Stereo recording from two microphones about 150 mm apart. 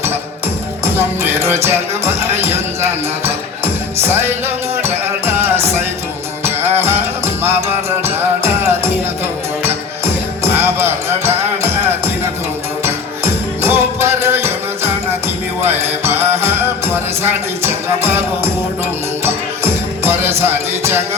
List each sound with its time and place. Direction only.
0.9 s music: 15° right (ahead or behind)
15.6 s music: 15° right (ahead or behind)
19.2 s music: 15° right (ahead or behind)